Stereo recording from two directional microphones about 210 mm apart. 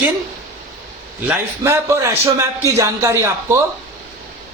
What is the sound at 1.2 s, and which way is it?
A man's voice, 10° right (ahead or behind).